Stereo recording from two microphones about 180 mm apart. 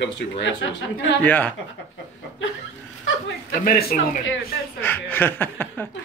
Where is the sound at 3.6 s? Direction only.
55° left (ahead or behind).